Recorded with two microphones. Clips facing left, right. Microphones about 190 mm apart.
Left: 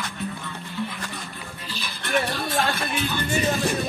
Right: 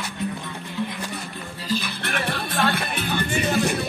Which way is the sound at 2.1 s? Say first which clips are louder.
Left 5 dB; 60° right (ahead or behind).